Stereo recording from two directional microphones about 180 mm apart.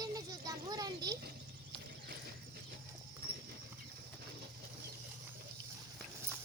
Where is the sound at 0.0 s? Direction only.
20° right (ahead or behind).